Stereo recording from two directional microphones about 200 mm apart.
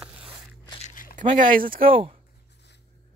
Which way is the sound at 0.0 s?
5° right (ahead or behind).